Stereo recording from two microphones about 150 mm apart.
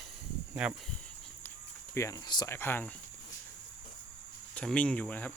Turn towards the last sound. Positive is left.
turn(degrees=10)  # may be behind; listen again after turning